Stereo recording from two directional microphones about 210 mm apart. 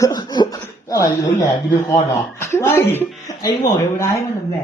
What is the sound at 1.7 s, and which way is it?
Speech, 15° left (ahead or behind).